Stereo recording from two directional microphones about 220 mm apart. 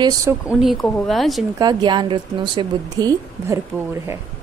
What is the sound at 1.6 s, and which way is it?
A woman's voice, 20° right (ahead or behind).